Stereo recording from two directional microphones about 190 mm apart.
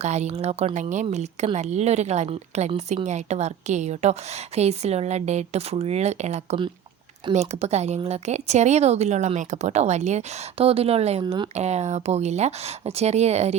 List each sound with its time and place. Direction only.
0.0 s a woman's voice: 35° right (ahead or behind)
11.5 s a woman's voice: 35° right (ahead or behind)